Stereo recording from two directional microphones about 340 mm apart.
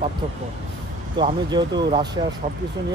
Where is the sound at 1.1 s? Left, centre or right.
Centre.